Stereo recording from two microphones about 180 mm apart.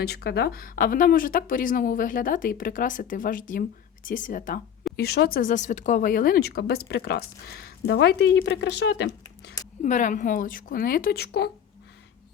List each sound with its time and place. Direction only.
0.0 s speech: 65° left (ahead or behind)
4.9 s speech: 60° left (ahead or behind)
9.8 s speech: 45° left (ahead or behind); by 11.5 s 65° left (ahead or behind)